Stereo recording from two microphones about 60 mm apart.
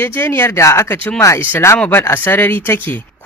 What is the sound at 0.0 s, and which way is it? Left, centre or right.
Speech, left.